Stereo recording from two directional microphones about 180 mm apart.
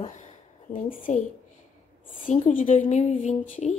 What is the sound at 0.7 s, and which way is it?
Speech, 45° left (ahead or behind).